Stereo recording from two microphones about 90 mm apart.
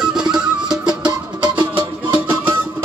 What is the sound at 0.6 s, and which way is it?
Music, 50° right (ahead or behind).